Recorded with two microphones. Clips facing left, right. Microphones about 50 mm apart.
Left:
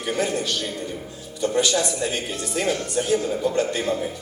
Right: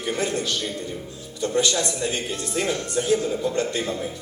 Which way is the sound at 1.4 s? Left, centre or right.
Centre.